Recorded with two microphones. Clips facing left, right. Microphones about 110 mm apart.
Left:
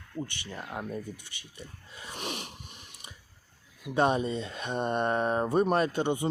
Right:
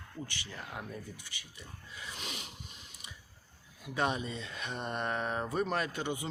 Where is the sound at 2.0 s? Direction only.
55° left (ahead or behind).